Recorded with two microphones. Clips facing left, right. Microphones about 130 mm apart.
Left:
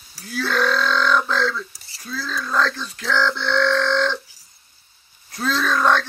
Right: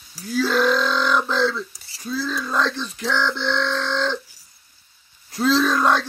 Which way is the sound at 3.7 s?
10° right (ahead or behind).